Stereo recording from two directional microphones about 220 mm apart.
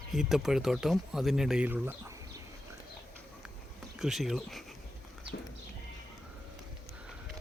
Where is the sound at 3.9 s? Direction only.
Centre (ahead or behind).